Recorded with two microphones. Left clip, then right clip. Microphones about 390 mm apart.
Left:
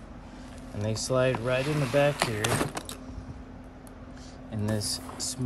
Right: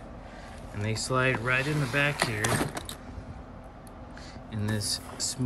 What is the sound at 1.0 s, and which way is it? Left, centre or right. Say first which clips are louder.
Speech: left 1 dB; centre.